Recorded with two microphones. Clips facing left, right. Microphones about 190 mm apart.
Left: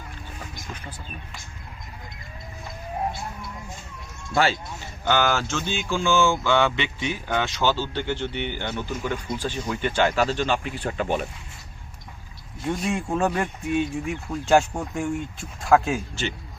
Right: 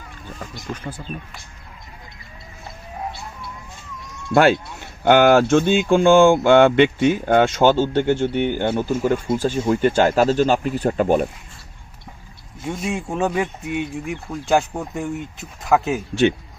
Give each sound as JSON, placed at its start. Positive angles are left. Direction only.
{"t": 0.7, "sound": "speech", "side_deg": -45}
{"t": 4.4, "sound": "speech", "side_deg": -55}
{"t": 12.6, "sound": "speech", "side_deg": -5}